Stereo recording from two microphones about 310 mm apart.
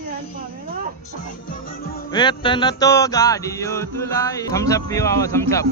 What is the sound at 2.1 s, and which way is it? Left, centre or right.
Music, centre.